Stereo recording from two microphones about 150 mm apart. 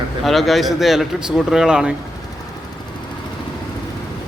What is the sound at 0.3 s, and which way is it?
A man's voice, centre (ahead or behind).